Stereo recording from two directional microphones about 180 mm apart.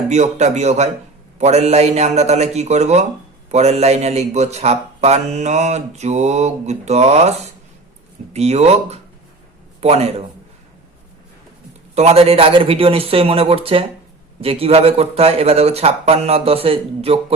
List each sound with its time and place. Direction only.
0.1 s a man's voice: 40° right (ahead or behind)
11.9 s a man's voice: 35° right (ahead or behind)